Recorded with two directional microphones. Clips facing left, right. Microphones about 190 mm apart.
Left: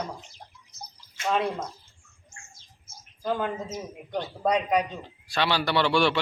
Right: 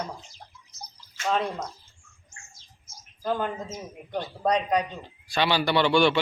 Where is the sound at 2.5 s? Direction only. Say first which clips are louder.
Even; 55° left (ahead or behind).